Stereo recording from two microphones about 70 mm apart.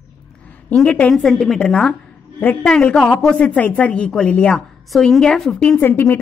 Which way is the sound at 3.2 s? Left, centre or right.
Centre.